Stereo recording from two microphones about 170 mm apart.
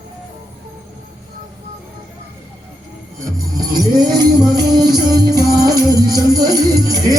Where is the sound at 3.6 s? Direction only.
25° right (ahead or behind).